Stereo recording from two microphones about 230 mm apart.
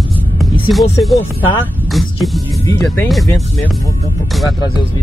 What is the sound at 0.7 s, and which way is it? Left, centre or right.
Speech, centre.